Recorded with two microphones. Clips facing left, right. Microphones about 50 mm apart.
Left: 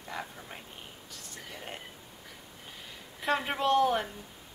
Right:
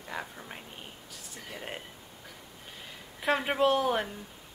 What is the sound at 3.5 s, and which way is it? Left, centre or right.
Speech, centre.